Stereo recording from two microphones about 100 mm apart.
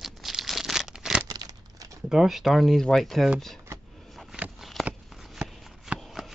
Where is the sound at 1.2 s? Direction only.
40° right (ahead or behind).